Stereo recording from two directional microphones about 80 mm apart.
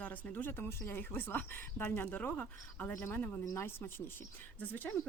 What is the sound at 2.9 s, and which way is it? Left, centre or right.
Speech, left.